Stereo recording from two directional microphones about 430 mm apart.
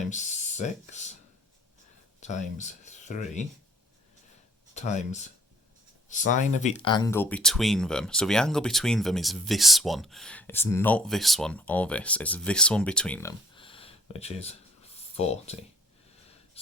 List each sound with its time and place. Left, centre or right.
0.1 s speech: centre
2.2 s speech: centre
4.7 s speech: centre
14.9 s a sound: centre